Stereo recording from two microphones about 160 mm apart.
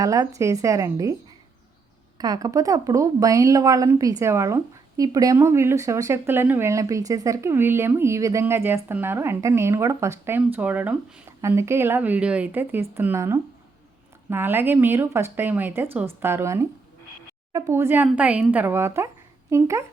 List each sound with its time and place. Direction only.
0.0 s speech: 20° right (ahead or behind)
2.1 s a woman's voice: 25° right (ahead or behind)